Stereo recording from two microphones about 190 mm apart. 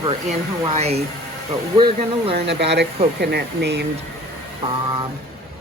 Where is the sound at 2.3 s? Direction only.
60° right (ahead or behind).